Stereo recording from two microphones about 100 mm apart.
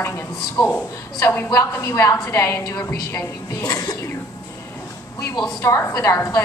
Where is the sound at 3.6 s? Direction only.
40° left (ahead or behind).